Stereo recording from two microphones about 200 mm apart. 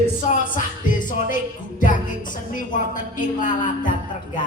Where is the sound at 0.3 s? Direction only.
40° left (ahead or behind).